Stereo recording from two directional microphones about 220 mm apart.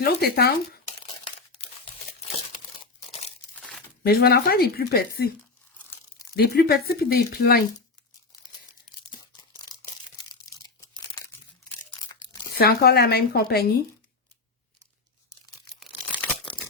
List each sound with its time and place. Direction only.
0.0 s speech: 45° left (ahead or behind)
2.8 s crumpling: 30° left (ahead or behind)
4.0 s speech: 45° left (ahead or behind)
6.3 s speech: 45° left (ahead or behind)
10.8 s crumpling: 15° left (ahead or behind)
12.5 s speech: 45° left (ahead or behind)